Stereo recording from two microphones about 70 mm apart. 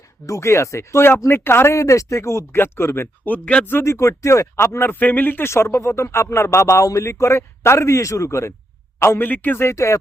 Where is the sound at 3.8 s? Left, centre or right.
Left.